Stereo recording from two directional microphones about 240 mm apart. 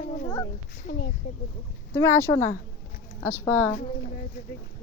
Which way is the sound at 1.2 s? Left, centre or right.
Left.